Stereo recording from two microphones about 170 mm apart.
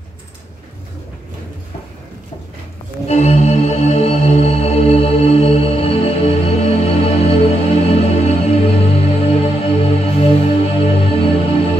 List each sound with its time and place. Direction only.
3.1 s music: 40° left (ahead or behind)